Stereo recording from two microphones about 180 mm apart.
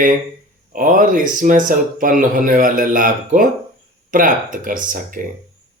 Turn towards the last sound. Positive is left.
turn(degrees=-50)  # may be behind; listen again after turning